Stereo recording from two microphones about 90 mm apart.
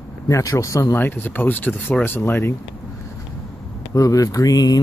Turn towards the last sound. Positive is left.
turn(degrees=45)  # may be behind; listen again after turning